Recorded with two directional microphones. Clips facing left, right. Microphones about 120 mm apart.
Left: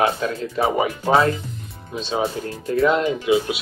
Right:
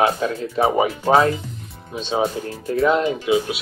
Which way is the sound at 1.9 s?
20° right (ahead or behind).